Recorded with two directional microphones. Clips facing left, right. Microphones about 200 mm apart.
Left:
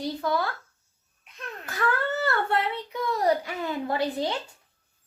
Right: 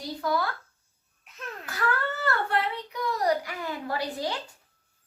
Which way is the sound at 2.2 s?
25° left (ahead or behind).